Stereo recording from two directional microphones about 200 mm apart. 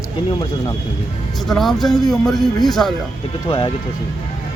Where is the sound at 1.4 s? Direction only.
Centre (ahead or behind).